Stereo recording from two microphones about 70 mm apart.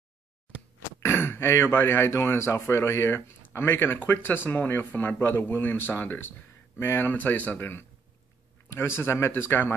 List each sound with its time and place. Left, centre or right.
1.0 s speech: left